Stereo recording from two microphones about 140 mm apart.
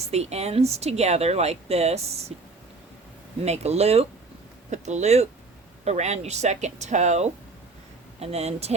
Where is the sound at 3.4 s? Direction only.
50° right (ahead or behind).